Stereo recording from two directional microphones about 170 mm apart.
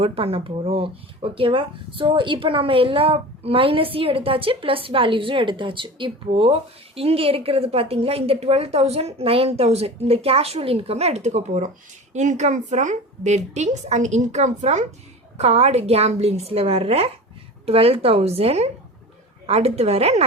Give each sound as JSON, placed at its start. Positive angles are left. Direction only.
{"t": 0.0, "sound": "a woman's voice", "side_deg": -35}